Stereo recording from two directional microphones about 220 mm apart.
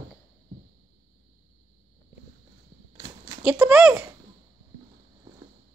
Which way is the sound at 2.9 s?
20° right (ahead or behind).